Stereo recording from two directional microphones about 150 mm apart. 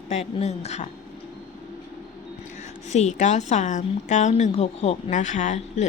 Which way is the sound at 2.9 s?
50° left (ahead or behind).